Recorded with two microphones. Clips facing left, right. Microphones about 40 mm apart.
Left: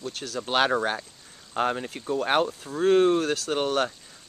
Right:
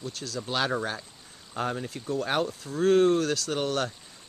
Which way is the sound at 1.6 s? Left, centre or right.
Left.